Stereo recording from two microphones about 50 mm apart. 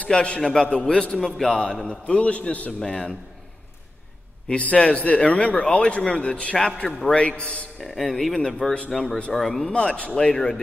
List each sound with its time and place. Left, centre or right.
0.1 s a man's voice: left
0.4 s a man's voice: centre
1.9 s a man's voice: left
2.8 s a man's voice: centre
4.5 s a man's voice: left
7.8 s a man's voice: centre
9.7 s a man's voice: centre